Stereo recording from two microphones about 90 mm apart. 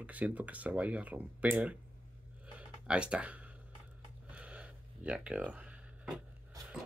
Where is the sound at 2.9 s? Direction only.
10° right (ahead or behind).